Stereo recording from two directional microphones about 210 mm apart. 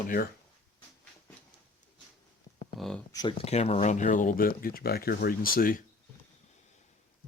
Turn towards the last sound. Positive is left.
turn(degrees=45)  # may be behind; listen again after turning